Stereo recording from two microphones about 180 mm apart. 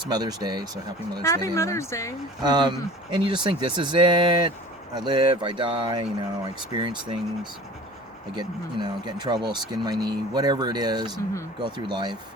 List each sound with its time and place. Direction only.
0.1 s speech: 20° right (ahead or behind)
1.2 s speech: 15° left (ahead or behind)
2.4 s speech: 25° right (ahead or behind)
8.4 s speech: 25° right (ahead or behind)